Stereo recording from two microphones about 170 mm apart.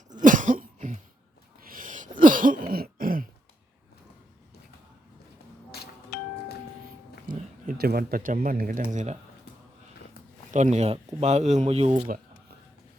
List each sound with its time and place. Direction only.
0.1 s cough: 50° right (ahead or behind)
1.6 s throat clearing: 55° right (ahead or behind)
5.7 s music: 70° left (ahead or behind)
7.3 s speech: 60° right (ahead or behind)
10.5 s speech: 40° right (ahead or behind)